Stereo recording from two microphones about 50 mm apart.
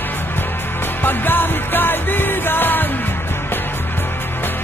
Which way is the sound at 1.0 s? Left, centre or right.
Left.